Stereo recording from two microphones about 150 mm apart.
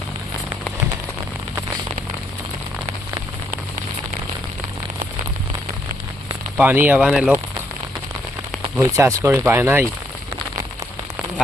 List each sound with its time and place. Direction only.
6.6 s speech: 10° right (ahead or behind)
8.8 s speech: 20° right (ahead or behind)